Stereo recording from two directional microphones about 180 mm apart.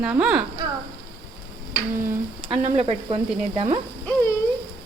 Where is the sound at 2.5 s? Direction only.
35° right (ahead or behind).